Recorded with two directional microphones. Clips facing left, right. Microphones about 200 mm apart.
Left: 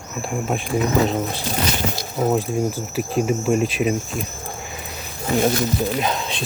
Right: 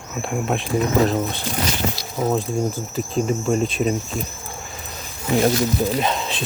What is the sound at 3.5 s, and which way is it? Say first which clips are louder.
Speech: left 1 dB; 5° left (ahead or behind).